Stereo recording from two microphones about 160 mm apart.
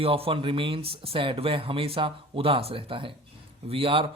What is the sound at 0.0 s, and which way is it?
Speech, 35° right (ahead or behind).